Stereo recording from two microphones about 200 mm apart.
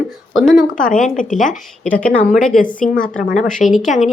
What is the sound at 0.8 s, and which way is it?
Speech, 40° left (ahead or behind).